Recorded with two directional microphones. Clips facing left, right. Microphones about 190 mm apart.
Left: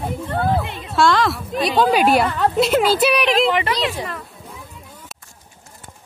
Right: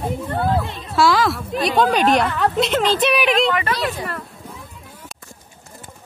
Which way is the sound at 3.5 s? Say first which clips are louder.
Left 1 dB; 20° left (ahead or behind).